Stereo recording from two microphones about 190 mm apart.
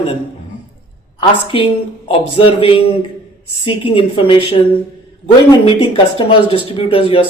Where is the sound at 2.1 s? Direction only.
30° left (ahead or behind).